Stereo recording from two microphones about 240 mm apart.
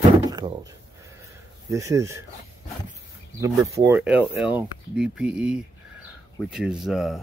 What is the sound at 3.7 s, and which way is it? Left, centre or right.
Speech, centre.